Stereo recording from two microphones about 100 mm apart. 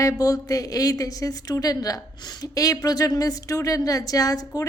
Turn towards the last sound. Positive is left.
turn(degrees=35)  # may be behind; listen again after turning